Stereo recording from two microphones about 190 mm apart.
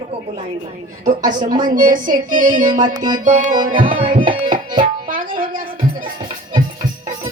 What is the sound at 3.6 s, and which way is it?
Music, 45° right (ahead or behind).